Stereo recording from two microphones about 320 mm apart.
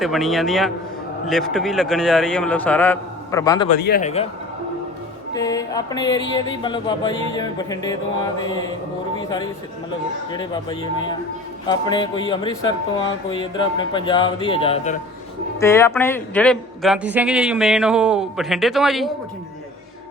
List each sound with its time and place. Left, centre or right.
0.0 s a man's voice: centre
3.7 s a man's voice: left
5.3 s music: centre
15.6 s a man's voice: centre